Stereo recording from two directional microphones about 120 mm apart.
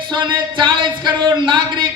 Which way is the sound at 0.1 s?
40° right (ahead or behind).